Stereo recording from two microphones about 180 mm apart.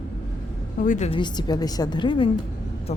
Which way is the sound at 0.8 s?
40° left (ahead or behind).